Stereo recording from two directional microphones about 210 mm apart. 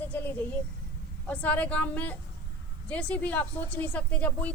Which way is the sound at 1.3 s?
5° left (ahead or behind).